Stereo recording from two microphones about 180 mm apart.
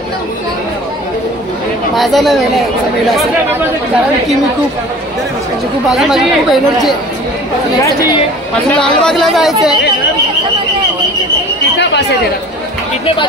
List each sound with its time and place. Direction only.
2.0 s speech: centre (ahead or behind)
5.9 s speech: centre (ahead or behind)
8.7 s speech: 5° left (ahead or behind)
13.0 s speech: 25° left (ahead or behind)